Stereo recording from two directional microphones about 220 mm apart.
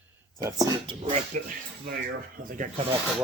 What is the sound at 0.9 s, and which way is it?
Speech, 20° right (ahead or behind).